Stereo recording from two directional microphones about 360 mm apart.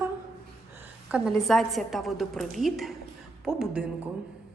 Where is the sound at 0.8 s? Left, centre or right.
Centre.